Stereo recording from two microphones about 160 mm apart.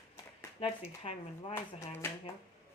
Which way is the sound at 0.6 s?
35° left (ahead or behind).